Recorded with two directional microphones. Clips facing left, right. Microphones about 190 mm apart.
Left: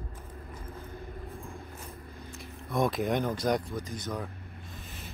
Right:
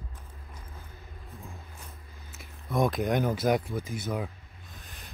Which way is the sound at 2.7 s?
Centre (ahead or behind).